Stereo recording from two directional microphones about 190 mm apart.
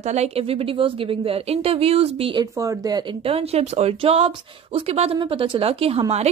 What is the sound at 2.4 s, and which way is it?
Speech, 15° right (ahead or behind).